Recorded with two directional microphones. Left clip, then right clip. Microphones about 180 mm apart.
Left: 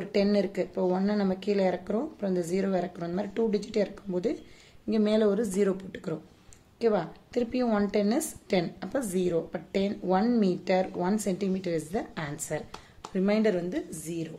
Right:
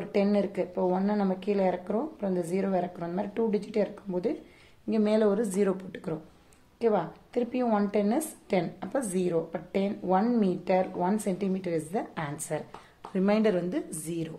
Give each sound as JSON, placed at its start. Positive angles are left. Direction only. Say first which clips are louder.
{"t": 0.0, "sound": "a woman's voice", "louder": "left 1 dB", "side_deg": 30}